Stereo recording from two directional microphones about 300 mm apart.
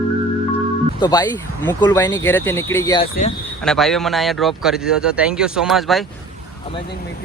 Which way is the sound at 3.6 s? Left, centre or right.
Centre.